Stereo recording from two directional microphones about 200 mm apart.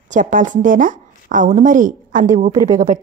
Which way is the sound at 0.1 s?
40° right (ahead or behind).